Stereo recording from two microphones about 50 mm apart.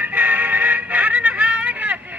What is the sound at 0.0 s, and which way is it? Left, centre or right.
Music, right.